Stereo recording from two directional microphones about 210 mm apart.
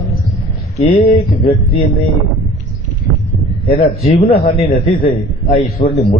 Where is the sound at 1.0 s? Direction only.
25° left (ahead or behind).